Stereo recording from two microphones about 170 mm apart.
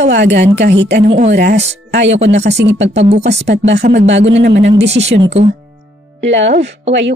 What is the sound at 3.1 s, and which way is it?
Speech, 45° right (ahead or behind).